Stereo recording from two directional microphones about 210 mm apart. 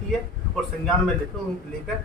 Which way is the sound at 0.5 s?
Centre (ahead or behind).